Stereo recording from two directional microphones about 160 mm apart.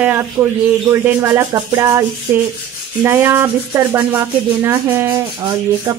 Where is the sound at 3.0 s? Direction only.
15° right (ahead or behind).